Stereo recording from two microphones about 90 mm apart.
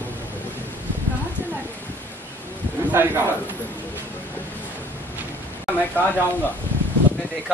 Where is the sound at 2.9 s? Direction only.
25° right (ahead or behind).